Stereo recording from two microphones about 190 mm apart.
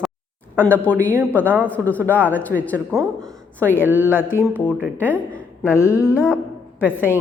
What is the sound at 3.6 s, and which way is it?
Speech, 10° left (ahead or behind).